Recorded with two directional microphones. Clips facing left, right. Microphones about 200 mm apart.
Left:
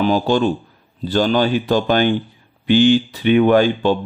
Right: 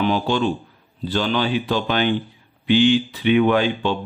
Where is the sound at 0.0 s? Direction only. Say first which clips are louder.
Left 4 dB; 40° left (ahead or behind).